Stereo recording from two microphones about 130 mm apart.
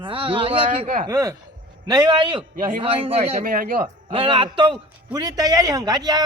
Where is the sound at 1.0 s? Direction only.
25° right (ahead or behind).